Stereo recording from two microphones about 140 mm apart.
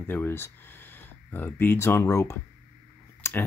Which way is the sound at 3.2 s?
20° left (ahead or behind).